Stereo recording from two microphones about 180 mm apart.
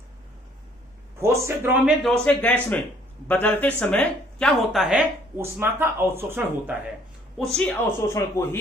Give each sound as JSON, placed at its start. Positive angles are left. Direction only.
{"t": 1.2, "sound": "speech", "side_deg": -15}
{"t": 2.0, "sound": "a woman's voice", "side_deg": 5}
{"t": 5.4, "sound": "speech", "side_deg": -15}
{"t": 7.3, "sound": "a woman's voice", "side_deg": 0}